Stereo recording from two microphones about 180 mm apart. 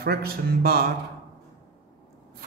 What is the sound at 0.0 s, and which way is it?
Speech, 60° right (ahead or behind).